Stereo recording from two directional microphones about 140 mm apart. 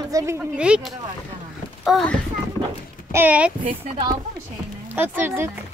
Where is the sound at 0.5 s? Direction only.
5° right (ahead or behind).